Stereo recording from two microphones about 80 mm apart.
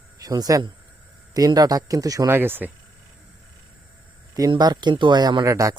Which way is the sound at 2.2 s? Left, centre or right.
Right.